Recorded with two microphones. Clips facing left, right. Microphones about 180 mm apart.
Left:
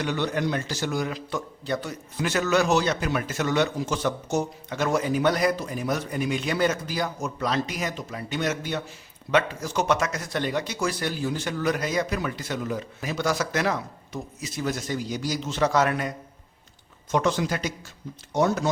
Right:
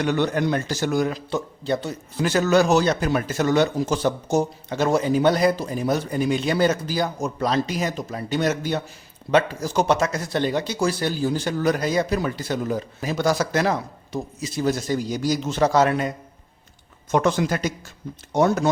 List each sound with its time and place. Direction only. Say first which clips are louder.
0.0 s a man's voice: right 5 dB; 50° right (ahead or behind)
1.3 s a man's voice: right 5 dB; 25° right (ahead or behind); by 15.7 s 45° right (ahead or behind)
15.7 s a man's voice: right 4 dB; 30° right (ahead or behind)
17.1 s a man's voice: right 4 dB; 50° right (ahead or behind)